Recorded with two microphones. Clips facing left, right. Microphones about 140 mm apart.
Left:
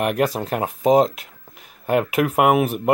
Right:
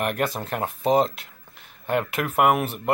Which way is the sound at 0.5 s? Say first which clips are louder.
Left 4 dB; 10° left (ahead or behind).